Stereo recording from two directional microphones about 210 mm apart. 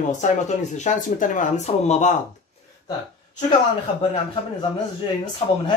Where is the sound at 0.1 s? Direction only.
35° left (ahead or behind).